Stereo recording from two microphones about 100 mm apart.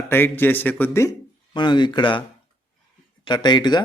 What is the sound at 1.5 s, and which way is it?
Speech, 55° left (ahead or behind).